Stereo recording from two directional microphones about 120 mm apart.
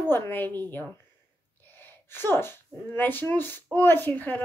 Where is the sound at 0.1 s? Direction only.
15° left (ahead or behind).